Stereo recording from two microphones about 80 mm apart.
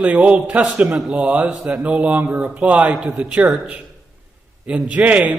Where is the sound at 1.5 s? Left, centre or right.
Centre.